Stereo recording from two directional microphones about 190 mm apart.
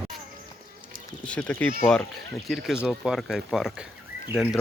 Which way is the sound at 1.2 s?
5° left (ahead or behind).